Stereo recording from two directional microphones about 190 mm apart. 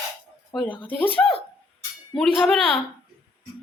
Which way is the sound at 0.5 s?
10° left (ahead or behind).